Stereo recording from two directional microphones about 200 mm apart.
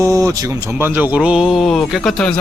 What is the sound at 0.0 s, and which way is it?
Speech, 15° right (ahead or behind).